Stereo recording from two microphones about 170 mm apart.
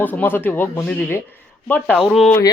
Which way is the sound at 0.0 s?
10° left (ahead or behind).